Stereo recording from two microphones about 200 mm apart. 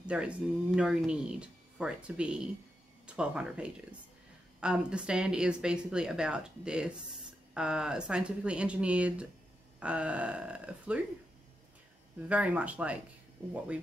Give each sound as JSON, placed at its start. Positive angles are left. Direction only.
{"t": 0.0, "sound": "speech", "side_deg": -5}
{"t": 12.3, "sound": "speech", "side_deg": -5}